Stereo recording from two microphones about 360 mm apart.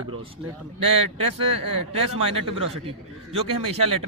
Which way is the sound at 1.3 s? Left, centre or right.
Right.